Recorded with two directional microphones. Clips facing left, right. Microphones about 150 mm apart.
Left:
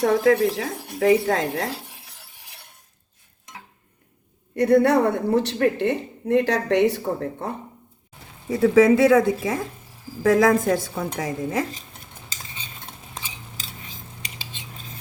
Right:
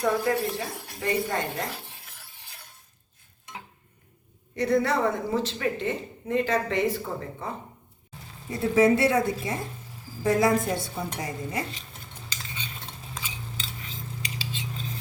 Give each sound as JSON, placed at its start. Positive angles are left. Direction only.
{"t": 0.0, "sound": "speech", "side_deg": 90}
{"t": 4.5, "sound": "a woman's voice", "side_deg": 60}
{"t": 8.4, "sound": "speech", "side_deg": 90}